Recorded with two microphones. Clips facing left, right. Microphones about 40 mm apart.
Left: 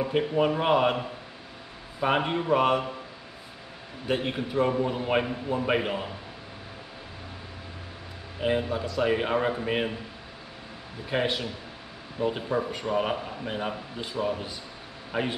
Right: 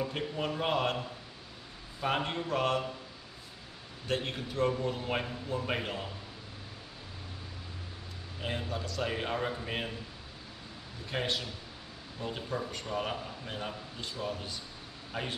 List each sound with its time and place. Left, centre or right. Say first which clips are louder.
0.0 s a man's voice: left 10 dB; left
2.0 s a man's voice: left 7 dB; left
4.1 s a man's voice: left 7 dB; centre
8.4 s a man's voice: left 10 dB; centre
11.1 s a man's voice: left 7 dB; centre